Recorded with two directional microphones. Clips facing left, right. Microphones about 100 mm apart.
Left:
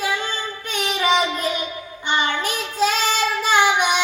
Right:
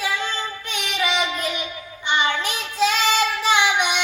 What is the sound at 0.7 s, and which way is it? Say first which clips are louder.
Child singing: left 5 dB; 40° left (ahead or behind).